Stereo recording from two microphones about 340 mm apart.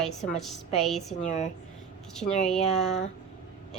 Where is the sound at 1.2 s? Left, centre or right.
Centre.